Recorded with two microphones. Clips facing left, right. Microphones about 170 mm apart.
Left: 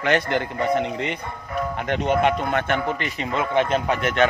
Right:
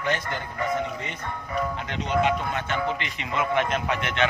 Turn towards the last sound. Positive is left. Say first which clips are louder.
# left 5 dB
turn(degrees=40)  # may be behind; listen again after turning